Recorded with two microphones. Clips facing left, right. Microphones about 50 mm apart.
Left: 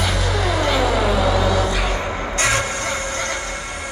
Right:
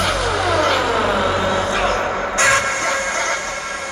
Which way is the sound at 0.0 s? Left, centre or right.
Right.